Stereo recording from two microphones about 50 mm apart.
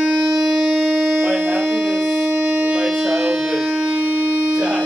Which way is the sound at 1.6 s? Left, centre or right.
Centre.